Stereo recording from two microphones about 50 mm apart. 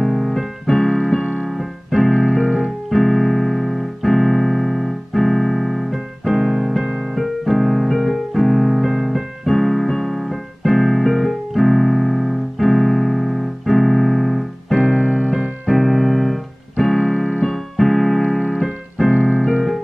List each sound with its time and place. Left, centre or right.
0.0 s keyboard: centre
1.2 s keyboard: centre
1.9 s keyboard: centre
2.9 s music: centre
7.2 s music: centre
14.8 s music: centre
15.6 s keyboard: centre
19.1 s music: centre